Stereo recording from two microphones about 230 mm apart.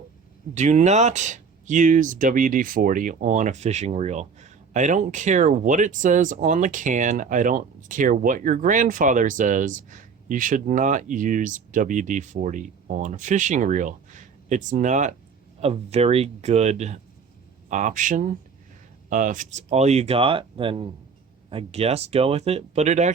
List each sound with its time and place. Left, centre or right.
0.5 s speech: right